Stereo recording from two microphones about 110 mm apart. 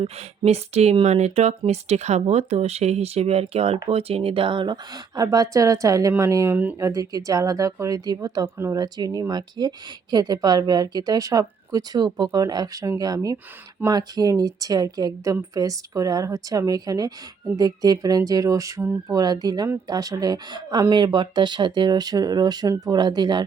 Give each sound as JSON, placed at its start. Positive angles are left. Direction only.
{"t": 0.0, "sound": "a woman's voice", "side_deg": -75}
{"t": 8.5, "sound": "speech", "side_deg": -25}
{"t": 8.8, "sound": "a woman's voice", "side_deg": -35}